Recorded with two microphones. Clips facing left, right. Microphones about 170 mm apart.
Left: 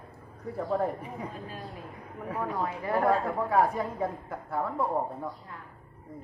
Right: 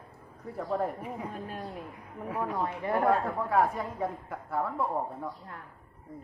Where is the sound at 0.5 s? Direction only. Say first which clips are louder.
Left 2 dB; centre (ahead or behind).